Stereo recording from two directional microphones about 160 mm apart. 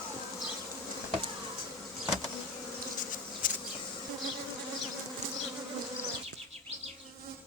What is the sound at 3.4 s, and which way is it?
Bee, 60° left (ahead or behind).